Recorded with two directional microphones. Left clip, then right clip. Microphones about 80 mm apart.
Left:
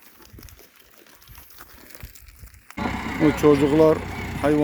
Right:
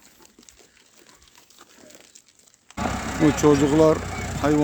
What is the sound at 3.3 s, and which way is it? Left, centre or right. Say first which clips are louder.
Speech: left 1 dB; right.